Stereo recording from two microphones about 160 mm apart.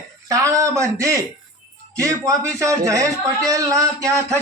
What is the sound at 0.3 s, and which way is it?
A man's voice, 20° right (ahead or behind).